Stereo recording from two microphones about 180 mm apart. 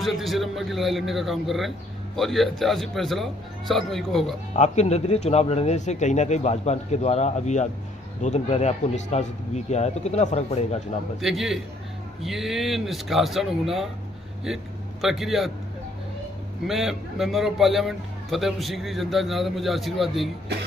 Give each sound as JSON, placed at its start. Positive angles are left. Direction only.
{"t": 0.0, "sound": "a man's voice", "side_deg": 0}
{"t": 4.6, "sound": "speech", "side_deg": 40}
{"t": 11.1, "sound": "a man's voice", "side_deg": 0}
{"t": 16.6, "sound": "a man's voice", "side_deg": 0}